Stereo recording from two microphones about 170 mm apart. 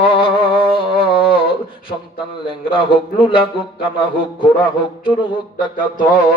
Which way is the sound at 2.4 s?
30° left (ahead or behind).